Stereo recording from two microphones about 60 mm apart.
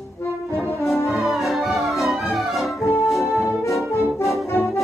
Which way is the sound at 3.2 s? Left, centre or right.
Left.